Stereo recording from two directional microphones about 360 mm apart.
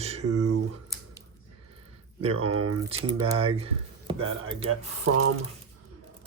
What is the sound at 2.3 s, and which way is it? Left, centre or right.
Speech, right.